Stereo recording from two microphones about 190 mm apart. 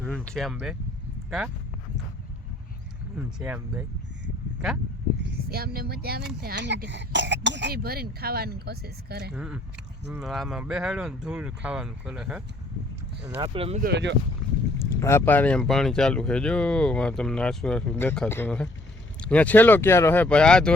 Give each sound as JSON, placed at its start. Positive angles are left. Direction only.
{"t": 0.0, "sound": "speech", "side_deg": 5}
{"t": 3.2, "sound": "speech", "side_deg": -5}
{"t": 5.2, "sound": "speech", "side_deg": -55}
{"t": 9.3, "sound": "speech", "side_deg": -5}
{"t": 13.4, "sound": "speech", "side_deg": -30}
{"t": 13.8, "sound": "speech", "side_deg": -65}
{"t": 14.8, "sound": "speech", "side_deg": 15}